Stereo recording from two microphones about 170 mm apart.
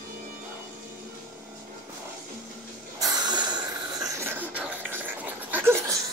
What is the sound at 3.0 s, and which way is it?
Snort, 25° right (ahead or behind).